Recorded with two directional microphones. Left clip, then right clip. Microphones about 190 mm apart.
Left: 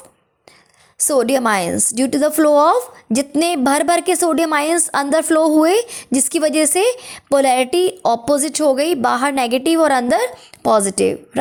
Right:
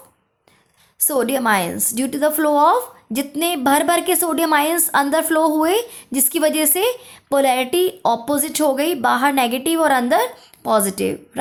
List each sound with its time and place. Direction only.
1.0 s a woman's voice: 35° left (ahead or behind)